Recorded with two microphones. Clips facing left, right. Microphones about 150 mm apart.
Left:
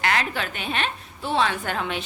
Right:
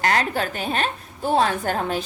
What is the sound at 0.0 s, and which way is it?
A woman's voice, 40° right (ahead or behind).